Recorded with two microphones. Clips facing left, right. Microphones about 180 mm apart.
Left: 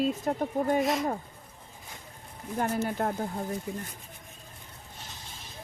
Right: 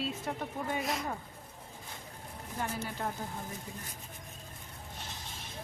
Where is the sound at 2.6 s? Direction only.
50° left (ahead or behind).